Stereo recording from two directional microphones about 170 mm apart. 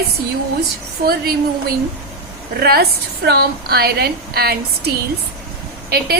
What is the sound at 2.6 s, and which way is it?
A woman's voice, 65° right (ahead or behind).